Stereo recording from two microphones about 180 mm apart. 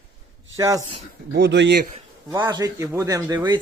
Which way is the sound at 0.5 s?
20° right (ahead or behind).